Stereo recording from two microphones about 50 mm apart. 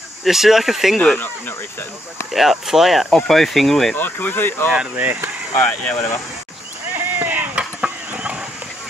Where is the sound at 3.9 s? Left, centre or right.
Left.